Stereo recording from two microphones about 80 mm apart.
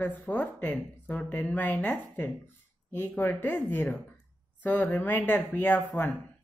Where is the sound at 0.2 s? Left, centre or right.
Centre.